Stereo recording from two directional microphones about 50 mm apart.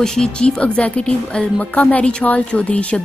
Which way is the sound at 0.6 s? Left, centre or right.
Left.